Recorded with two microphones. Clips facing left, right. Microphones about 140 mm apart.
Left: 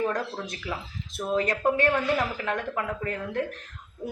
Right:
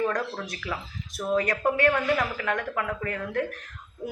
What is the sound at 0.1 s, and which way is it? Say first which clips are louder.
A woman's voice: right 1 dB; 25° left (ahead or behind).